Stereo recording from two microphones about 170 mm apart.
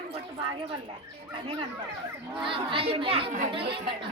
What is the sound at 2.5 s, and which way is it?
Speech, 30° right (ahead or behind).